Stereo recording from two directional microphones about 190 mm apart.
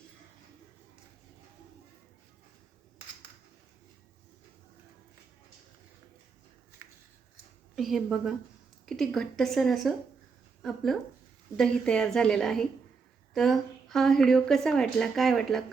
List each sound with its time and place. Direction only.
7.8 s a woman's voice: centre (ahead or behind)